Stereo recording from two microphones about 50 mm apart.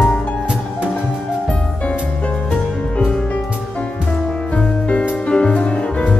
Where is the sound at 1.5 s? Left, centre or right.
Left.